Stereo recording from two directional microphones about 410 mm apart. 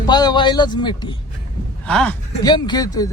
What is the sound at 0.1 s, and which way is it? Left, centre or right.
Speech, centre.